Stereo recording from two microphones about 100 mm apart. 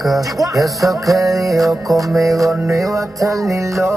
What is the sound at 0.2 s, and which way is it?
Music, 35° right (ahead or behind).